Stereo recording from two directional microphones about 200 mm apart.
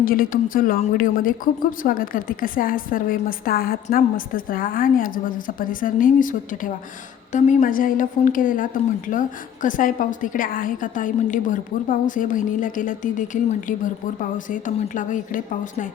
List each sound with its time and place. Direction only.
0.0 s a woman's voice: 45° left (ahead or behind)